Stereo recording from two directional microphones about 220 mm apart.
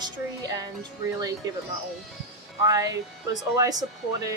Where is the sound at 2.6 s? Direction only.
15° right (ahead or behind).